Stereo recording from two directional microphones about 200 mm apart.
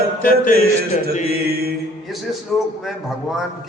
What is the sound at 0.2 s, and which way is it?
Music, 45° left (ahead or behind).